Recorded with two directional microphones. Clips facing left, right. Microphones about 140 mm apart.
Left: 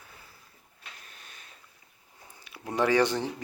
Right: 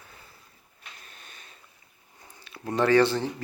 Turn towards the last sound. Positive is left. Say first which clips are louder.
# right 3 dB
turn(degrees=15)  # may be behind; listen again after turning